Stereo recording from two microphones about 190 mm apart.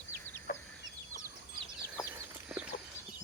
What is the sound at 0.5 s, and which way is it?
Chicken, 50° left (ahead or behind).